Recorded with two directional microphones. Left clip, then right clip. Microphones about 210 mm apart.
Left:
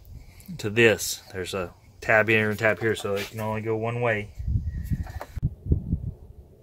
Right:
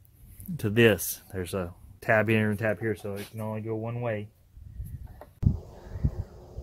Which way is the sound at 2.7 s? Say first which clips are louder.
Left 6 dB; 10° right (ahead or behind).